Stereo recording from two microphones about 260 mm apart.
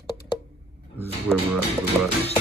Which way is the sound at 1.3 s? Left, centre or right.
Centre.